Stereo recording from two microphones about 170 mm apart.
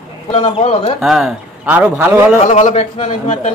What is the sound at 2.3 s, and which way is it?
A man's voice, 45° left (ahead or behind).